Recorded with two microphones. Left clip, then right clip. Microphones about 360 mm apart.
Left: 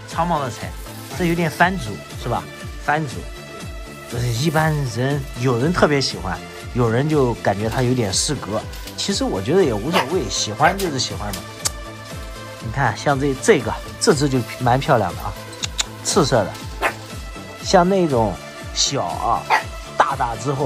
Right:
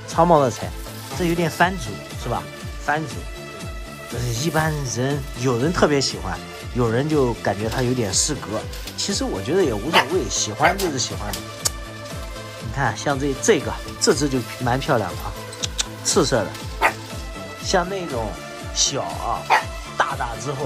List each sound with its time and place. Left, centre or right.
0.1 s speech: centre
4.1 s speech: centre
12.7 s speech: centre
15.6 s music: centre
17.6 s speech: centre